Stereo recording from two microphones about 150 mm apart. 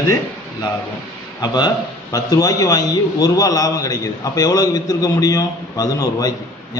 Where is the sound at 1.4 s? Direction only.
25° left (ahead or behind).